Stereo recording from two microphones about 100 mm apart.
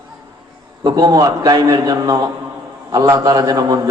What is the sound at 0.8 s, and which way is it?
A man's voice, 40° right (ahead or behind).